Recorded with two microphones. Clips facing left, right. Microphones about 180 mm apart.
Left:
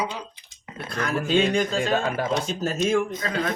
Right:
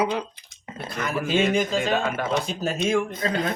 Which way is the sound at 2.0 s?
35° left (ahead or behind).